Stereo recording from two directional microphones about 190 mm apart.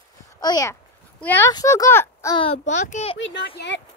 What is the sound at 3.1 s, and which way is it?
Speech, 75° left (ahead or behind).